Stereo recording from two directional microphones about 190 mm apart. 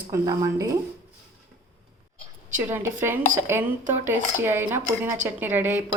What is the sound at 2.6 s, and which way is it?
A woman's voice, 10° right (ahead or behind).